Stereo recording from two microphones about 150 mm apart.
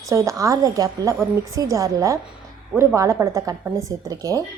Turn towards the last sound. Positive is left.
turn(degrees=-20)  # may be behind; listen again after turning